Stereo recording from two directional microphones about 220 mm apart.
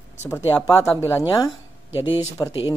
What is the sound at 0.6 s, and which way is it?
Speech, 15° left (ahead or behind).